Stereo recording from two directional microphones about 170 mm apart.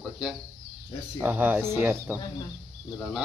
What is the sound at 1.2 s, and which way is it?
Speech, 10° right (ahead or behind).